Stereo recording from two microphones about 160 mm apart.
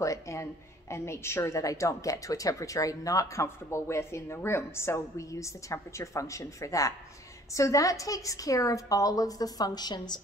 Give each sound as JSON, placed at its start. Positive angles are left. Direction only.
{"t": 0.0, "sound": "a woman's voice", "side_deg": 20}